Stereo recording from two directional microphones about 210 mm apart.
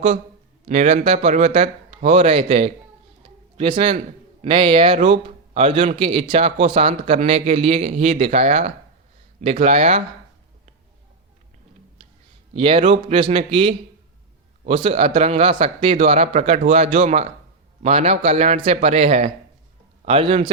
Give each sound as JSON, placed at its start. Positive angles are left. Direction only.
{"t": 0.7, "sound": "a man's voice", "side_deg": -30}
{"t": 3.2, "sound": "a sound", "side_deg": -25}
{"t": 4.4, "sound": "a man's voice", "side_deg": -25}
{"t": 12.5, "sound": "a man's voice", "side_deg": -25}